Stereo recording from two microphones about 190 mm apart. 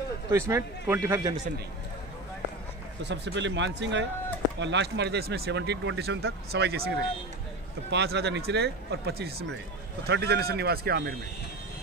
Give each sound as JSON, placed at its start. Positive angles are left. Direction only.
{"t": 0.3, "sound": "a man's voice", "side_deg": -15}
{"t": 3.0, "sound": "speech", "side_deg": -65}